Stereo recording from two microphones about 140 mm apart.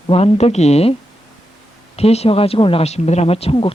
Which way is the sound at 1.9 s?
45° left (ahead or behind).